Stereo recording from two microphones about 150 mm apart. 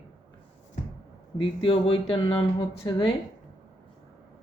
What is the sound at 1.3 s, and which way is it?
Speech, 35° left (ahead or behind).